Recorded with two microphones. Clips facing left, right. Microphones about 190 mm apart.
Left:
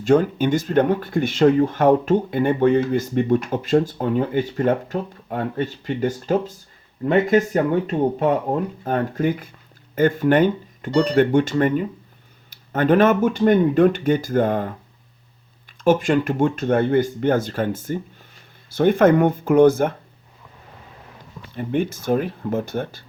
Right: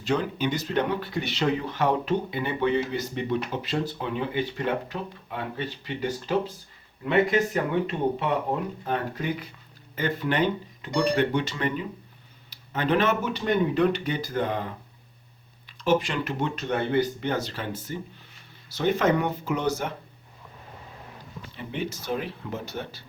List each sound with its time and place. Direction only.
0.0 s speech: 50° left (ahead or behind)
15.8 s speech: 50° left (ahead or behind)
21.5 s speech: 50° left (ahead or behind)